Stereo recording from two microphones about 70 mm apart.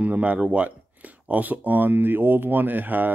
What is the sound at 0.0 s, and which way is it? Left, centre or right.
Speech, right.